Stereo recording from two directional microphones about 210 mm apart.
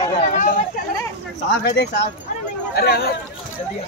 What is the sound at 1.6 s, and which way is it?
Speech, 55° left (ahead or behind).